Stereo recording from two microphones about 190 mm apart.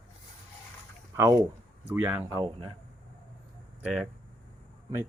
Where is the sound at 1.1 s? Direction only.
15° right (ahead or behind).